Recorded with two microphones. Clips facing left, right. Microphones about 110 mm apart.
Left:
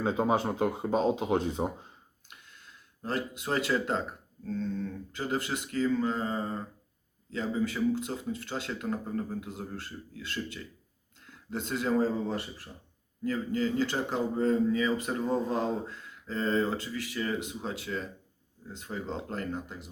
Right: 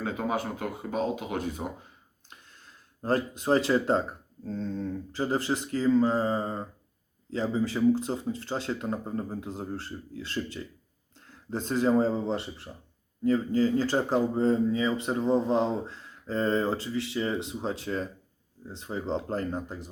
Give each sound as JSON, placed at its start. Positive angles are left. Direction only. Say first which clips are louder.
{"t": 0.0, "sound": "speech", "louder": "left 3 dB", "side_deg": 25}
{"t": 2.2, "sound": "a sound", "louder": "right 2 dB", "side_deg": -35}
{"t": 4.4, "sound": "speech", "louder": "right 1 dB", "side_deg": -35}
{"t": 18.8, "sound": "speech", "louder": "right 5 dB", "side_deg": -25}